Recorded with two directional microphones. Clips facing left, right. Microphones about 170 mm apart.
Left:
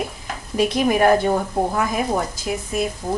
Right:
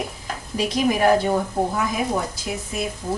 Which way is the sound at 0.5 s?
55° left (ahead or behind).